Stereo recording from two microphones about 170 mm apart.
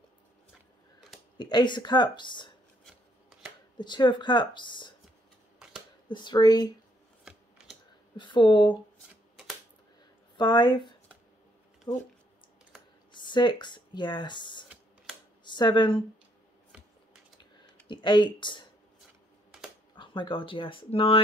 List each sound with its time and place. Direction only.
1.4 s speech: 25° left (ahead or behind)
2.8 s filing: centre (ahead or behind)
3.7 s speech: 25° left (ahead or behind)
6.0 s speech: 25° left (ahead or behind)
8.2 s speech: 30° left (ahead or behind)
10.3 s speech: 25° left (ahead or behind)
13.1 s speech: 25° left (ahead or behind)
17.8 s speech: 25° left (ahead or behind)
20.0 s speech: 30° left (ahead or behind)